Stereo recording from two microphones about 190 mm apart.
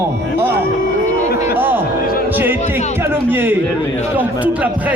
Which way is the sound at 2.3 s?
10° right (ahead or behind).